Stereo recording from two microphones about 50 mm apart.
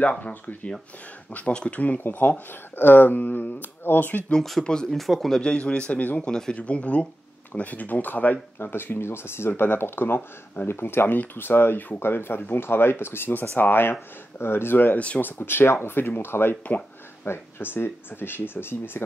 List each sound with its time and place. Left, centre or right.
0.2 s speech: left
1.3 s a man's voice: left
4.8 s speech: centre
5.4 s a man's voice: left
6.2 s speech: centre
6.5 s a man's voice: left
8.5 s speech: left
16.6 s a sound: left
17.3 s speech: left